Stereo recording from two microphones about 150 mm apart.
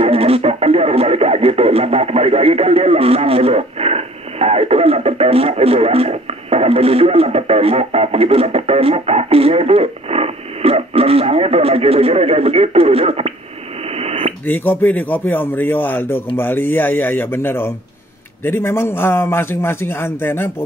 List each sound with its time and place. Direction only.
0.0 s speech: 40° right (ahead or behind)
13.9 s radio: 40° right (ahead or behind)
14.4 s a man's voice: 15° left (ahead or behind)